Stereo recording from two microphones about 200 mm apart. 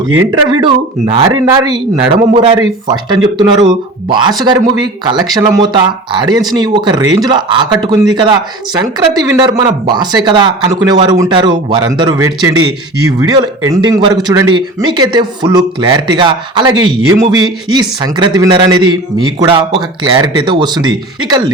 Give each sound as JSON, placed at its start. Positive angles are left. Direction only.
{"t": 0.3, "sound": "speech", "side_deg": -25}
{"t": 13.7, "sound": "speech", "side_deg": -20}